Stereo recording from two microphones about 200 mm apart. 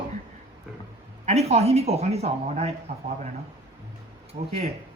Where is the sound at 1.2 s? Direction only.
30° right (ahead or behind).